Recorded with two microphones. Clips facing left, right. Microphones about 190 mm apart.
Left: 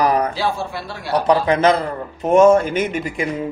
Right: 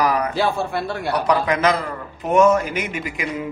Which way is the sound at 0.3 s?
55° right (ahead or behind).